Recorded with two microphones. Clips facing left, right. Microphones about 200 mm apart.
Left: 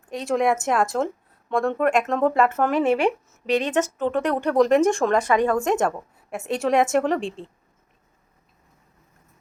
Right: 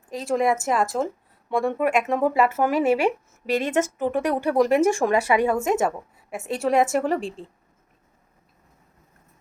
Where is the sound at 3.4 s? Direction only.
45° right (ahead or behind).